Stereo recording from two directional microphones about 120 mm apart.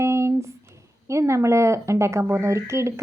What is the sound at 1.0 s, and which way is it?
A woman's voice, 25° right (ahead or behind).